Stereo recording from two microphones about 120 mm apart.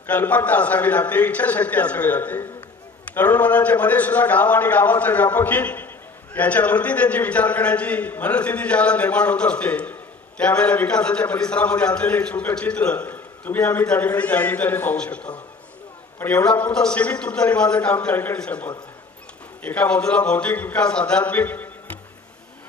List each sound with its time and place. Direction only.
0.0 s a man's voice: 15° left (ahead or behind)
16.2 s a man's voice: 20° left (ahead or behind)